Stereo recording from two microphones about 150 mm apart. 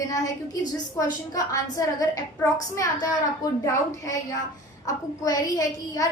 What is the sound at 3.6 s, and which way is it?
A woman's voice, 20° left (ahead or behind).